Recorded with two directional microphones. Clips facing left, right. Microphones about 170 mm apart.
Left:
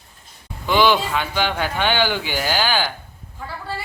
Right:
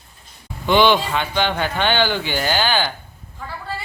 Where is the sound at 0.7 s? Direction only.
5° left (ahead or behind).